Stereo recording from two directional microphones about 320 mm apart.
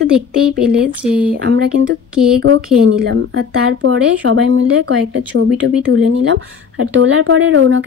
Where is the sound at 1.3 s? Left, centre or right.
Right.